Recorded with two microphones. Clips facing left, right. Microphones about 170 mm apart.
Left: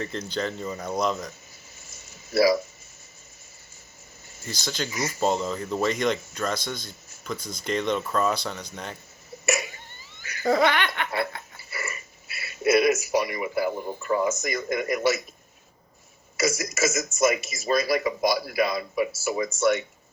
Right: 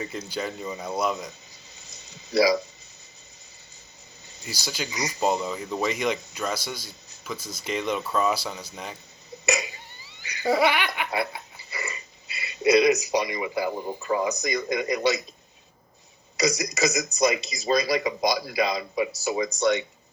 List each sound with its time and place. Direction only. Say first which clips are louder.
0.0 s speech: left 2 dB; 10° right (ahead or behind)
1.1 s a sound: left 1 dB; 15° right (ahead or behind)
4.3 s speech: left 2 dB; 15° right (ahead or behind)
5.5 s speech: left 2 dB; centre (ahead or behind)
7.9 s speech: even; 15° right (ahead or behind)
8.2 s speech: even; 5° right (ahead or behind)
9.3 s cough: even; 15° right (ahead or behind)
10.5 s a sound: even; 10° right (ahead or behind)
14.3 s speech: even; 15° right (ahead or behind)
16.4 s speech: right 1 dB; 15° right (ahead or behind)